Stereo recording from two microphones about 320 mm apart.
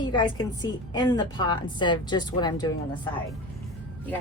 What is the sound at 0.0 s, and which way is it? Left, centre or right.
A woman's voice, centre.